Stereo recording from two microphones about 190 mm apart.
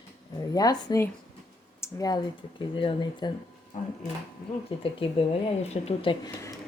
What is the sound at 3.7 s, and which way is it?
Speech, 40° left (ahead or behind).